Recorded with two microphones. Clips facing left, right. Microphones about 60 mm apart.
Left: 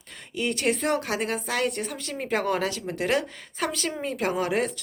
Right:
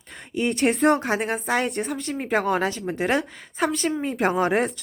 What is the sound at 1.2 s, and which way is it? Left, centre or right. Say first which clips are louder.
A woman's voice: right 3 dB; centre.